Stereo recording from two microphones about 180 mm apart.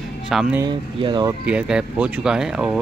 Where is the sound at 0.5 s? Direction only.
25° right (ahead or behind).